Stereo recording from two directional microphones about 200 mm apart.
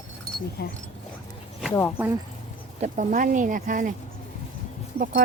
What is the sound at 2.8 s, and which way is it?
Speech, 40° right (ahead or behind).